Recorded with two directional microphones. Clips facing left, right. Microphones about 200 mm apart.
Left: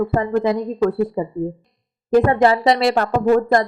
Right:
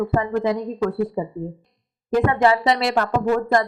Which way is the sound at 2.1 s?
35° left (ahead or behind).